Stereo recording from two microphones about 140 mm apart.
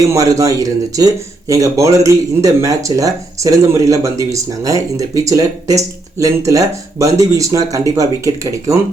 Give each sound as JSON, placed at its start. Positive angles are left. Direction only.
{"t": 0.1, "sound": "speech", "side_deg": -25}